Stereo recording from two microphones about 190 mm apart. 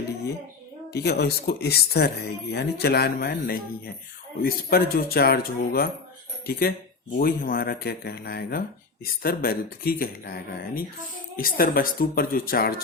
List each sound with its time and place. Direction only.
0.9 s speech: 60° left (ahead or behind)